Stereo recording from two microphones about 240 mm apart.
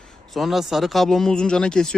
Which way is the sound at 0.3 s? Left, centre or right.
Centre.